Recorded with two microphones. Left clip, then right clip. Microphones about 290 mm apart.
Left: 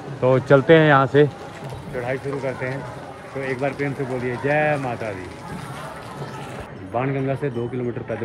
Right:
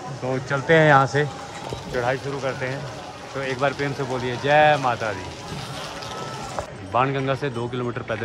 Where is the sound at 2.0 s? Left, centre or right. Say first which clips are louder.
Left 1 dB; centre.